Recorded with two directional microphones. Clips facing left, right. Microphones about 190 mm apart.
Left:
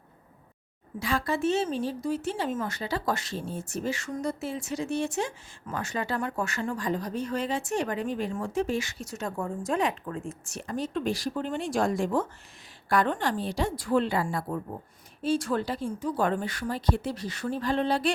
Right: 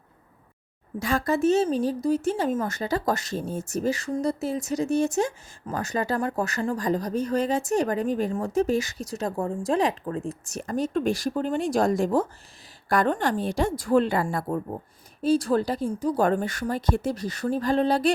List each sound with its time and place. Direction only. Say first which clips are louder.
0.9 s a woman's voice: right 4 dB; 45° right (ahead or behind)